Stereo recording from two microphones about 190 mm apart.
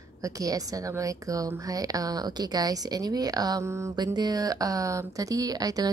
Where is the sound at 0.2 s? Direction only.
20° right (ahead or behind).